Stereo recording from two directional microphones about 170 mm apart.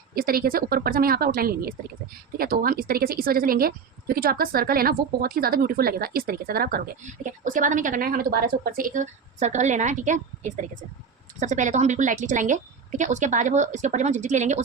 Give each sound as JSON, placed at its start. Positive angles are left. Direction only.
{"t": 0.1, "sound": "a woman's voice", "side_deg": -60}
{"t": 7.4, "sound": "a woman's voice", "side_deg": -50}
{"t": 11.3, "sound": "a woman's voice", "side_deg": -45}